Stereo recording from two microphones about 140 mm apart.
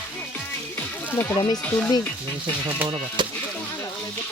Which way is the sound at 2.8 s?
40° right (ahead or behind).